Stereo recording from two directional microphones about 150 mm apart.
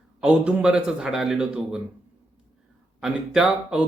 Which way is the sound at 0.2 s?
5° right (ahead or behind).